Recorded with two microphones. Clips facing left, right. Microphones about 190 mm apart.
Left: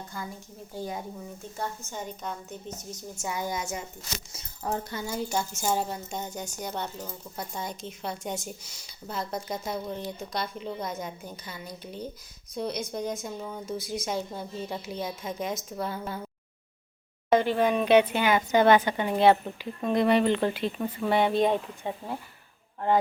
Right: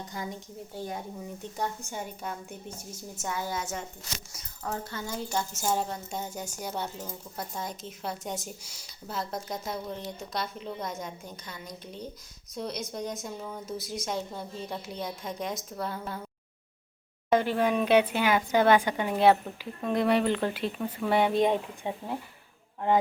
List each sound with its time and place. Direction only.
0.1 s a woman's voice: 15° right (ahead or behind)
3.2 s speech: 15° left (ahead or behind)
4.3 s speech: 25° left (ahead or behind); by 16.2 s centre (ahead or behind)
17.3 s a woman's voice: 5° right (ahead or behind)